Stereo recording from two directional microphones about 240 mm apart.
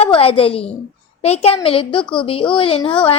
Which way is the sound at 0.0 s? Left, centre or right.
Left.